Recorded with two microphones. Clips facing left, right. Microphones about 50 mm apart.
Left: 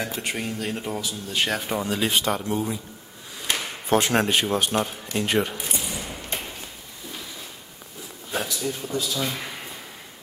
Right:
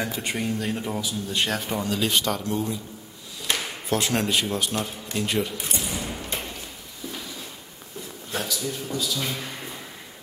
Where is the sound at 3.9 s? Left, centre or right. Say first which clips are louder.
Left 4 dB; left.